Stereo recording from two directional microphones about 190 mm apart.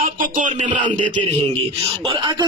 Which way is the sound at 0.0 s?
40° right (ahead or behind).